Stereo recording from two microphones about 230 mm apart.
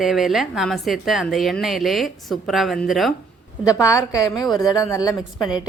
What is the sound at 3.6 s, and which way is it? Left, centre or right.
A woman's voice, centre.